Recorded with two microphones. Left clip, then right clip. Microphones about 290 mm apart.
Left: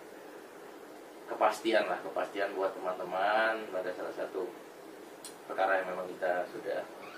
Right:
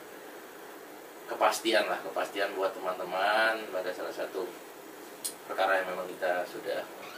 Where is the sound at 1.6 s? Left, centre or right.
Centre.